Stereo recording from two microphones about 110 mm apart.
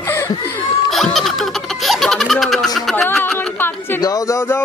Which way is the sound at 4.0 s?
35° left (ahead or behind).